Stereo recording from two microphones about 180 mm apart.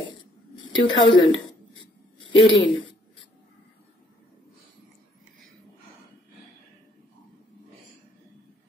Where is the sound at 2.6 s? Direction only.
25° left (ahead or behind).